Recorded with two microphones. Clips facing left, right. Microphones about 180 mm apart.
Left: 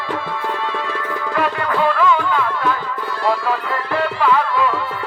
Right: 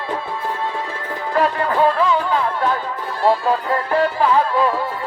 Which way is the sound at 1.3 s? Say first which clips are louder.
Right 3 dB; 35° right (ahead or behind).